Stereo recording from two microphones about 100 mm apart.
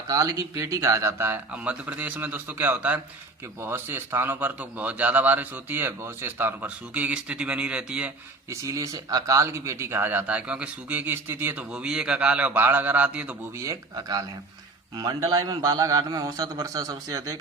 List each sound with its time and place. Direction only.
0.1 s a man's voice: 35° right (ahead or behind); by 8.1 s 10° right (ahead or behind)
8.4 s speech: 35° right (ahead or behind)
11.7 s a man's voice: 10° right (ahead or behind)
13.6 s a man's voice: 35° right (ahead or behind)